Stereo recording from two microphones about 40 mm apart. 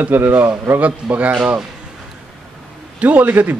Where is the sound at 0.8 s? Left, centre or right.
Right.